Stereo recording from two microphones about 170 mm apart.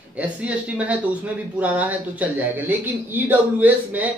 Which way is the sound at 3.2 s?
10° right (ahead or behind).